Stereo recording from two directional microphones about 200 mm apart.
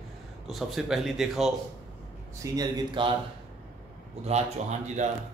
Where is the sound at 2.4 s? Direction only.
20° right (ahead or behind).